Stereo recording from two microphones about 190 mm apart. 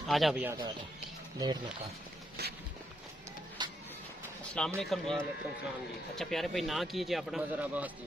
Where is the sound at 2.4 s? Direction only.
60° right (ahead or behind).